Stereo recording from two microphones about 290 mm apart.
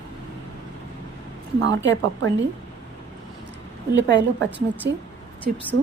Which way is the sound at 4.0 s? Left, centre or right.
Right.